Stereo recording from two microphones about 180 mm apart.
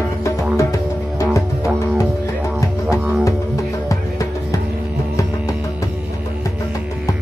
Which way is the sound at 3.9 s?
20° left (ahead or behind).